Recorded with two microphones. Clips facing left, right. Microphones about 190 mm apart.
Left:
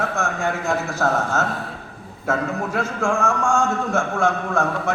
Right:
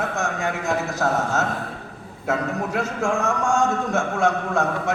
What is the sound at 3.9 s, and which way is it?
A man's voice, 20° right (ahead or behind).